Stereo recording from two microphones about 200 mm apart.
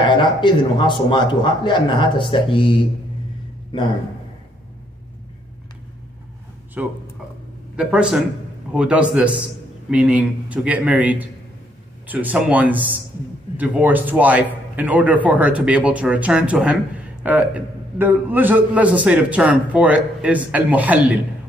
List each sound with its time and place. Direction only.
0.1 s a man's voice: 25° left (ahead or behind)
6.8 s a man's voice: 5° right (ahead or behind)